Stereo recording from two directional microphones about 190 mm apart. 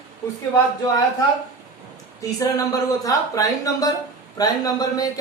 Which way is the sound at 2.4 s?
20° left (ahead or behind).